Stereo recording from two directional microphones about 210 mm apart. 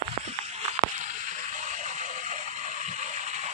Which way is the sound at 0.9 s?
35° right (ahead or behind).